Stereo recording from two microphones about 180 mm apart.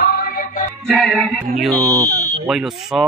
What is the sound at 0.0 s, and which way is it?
Music, 55° left (ahead or behind).